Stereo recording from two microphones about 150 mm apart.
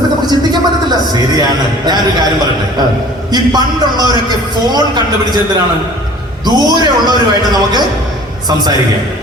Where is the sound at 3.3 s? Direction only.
25° right (ahead or behind).